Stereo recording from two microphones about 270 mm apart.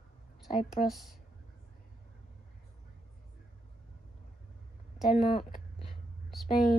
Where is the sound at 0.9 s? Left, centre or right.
Centre.